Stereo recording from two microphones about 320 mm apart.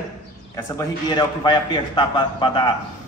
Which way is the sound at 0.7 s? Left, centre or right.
Centre.